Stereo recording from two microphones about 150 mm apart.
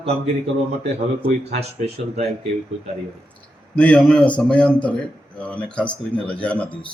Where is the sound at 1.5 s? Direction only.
45° right (ahead or behind).